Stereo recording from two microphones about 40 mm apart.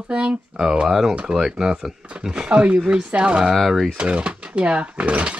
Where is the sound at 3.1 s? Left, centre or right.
Right.